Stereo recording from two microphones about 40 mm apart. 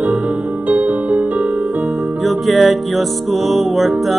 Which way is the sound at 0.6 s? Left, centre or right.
Right.